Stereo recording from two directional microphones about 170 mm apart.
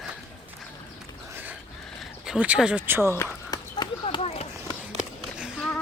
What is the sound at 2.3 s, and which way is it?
Speech, 5° right (ahead or behind).